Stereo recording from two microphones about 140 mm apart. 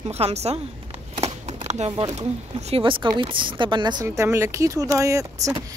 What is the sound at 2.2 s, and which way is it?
Speech, 50° right (ahead or behind).